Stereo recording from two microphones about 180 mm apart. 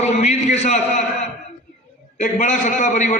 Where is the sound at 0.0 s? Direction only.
40° left (ahead or behind).